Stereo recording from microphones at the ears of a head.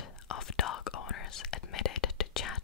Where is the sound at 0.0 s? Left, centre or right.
Left.